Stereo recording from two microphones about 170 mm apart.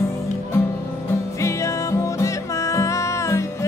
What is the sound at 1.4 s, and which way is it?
Music, 15° left (ahead or behind).